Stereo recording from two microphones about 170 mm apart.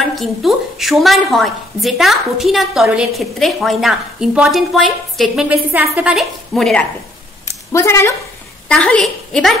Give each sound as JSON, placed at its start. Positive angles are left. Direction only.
{"t": 0.1, "sound": "a woman's voice", "side_deg": 0}
{"t": 7.4, "sound": "a sound", "side_deg": 20}
{"t": 8.6, "sound": "a woman's voice", "side_deg": 5}